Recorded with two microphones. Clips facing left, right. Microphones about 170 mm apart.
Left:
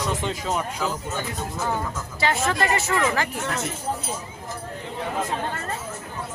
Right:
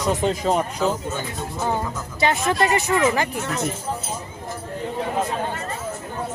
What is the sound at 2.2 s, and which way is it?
A woman's voice, 20° right (ahead or behind).